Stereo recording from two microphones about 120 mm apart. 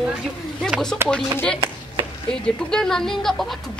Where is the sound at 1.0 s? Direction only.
20° right (ahead or behind).